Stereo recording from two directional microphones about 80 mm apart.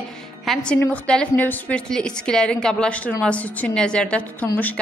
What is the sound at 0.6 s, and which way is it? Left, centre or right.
A woman's voice, centre.